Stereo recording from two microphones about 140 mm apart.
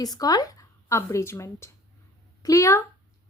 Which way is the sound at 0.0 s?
25° left (ahead or behind).